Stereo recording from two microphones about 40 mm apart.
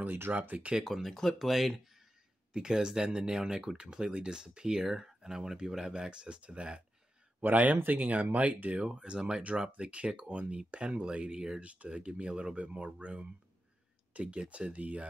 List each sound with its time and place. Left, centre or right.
0.0 s speech: right
0.3 s speech: right
0.7 s speech: centre
1.1 s speech: centre
1.5 s speech: centre
2.5 s speech: centre
7.4 s speech: right; by 11.6 s centre
11.6 s speech: right